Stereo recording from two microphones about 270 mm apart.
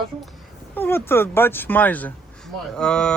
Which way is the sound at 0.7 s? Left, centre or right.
Centre.